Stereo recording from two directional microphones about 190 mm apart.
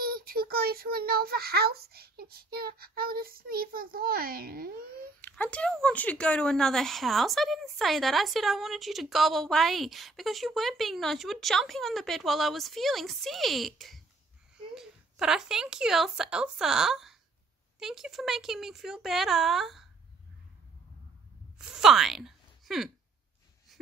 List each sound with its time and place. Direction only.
0.0 s a child's voice: 50° right (ahead or behind)
5.2 s speech: 5° left (ahead or behind)
21.7 s speech: centre (ahead or behind)